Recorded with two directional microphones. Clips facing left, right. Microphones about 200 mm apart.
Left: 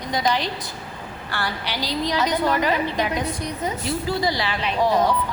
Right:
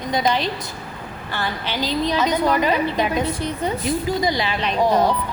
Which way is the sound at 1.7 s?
20° right (ahead or behind).